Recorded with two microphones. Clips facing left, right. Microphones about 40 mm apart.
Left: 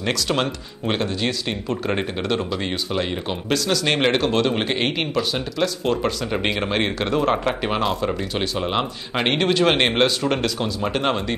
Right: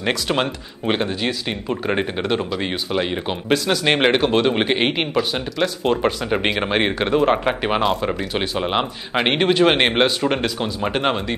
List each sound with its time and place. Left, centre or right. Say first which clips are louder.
0.0 s speech: right 1 dB; centre